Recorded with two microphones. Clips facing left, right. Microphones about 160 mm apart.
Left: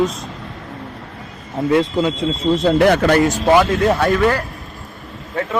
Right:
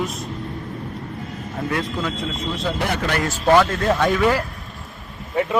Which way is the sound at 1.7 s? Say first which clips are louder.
Left 10 dB; 25° left (ahead or behind).